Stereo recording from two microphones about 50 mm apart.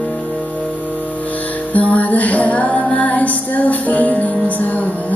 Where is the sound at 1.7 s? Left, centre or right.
Left.